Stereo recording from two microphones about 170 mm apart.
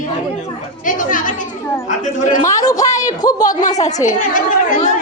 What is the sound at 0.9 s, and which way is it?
A woman's voice, 50° left (ahead or behind).